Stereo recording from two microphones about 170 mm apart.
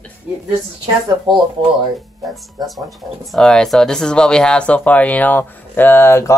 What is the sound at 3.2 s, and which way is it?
Speech, centre (ahead or behind).